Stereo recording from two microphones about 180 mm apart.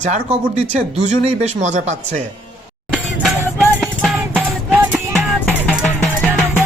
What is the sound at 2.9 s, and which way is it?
Music, centre (ahead or behind).